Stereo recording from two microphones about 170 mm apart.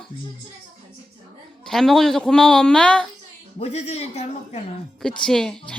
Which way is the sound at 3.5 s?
40° left (ahead or behind).